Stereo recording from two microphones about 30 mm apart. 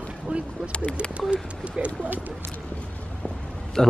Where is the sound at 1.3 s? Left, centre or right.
Right.